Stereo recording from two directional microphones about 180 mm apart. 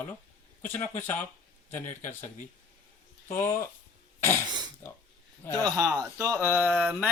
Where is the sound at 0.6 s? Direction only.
10° left (ahead or behind).